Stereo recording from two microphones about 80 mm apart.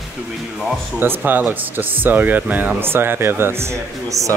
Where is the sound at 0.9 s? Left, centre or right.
Right.